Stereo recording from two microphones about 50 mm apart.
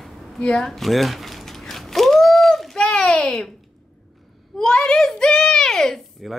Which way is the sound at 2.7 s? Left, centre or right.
Centre.